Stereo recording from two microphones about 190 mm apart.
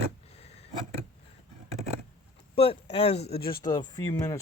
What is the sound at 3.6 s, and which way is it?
Speech, 20° left (ahead or behind).